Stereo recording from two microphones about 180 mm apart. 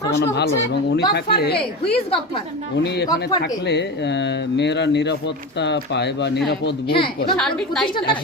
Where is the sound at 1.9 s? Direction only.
35° left (ahead or behind).